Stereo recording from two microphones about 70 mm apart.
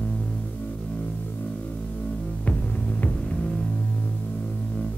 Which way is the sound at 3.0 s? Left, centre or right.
Centre.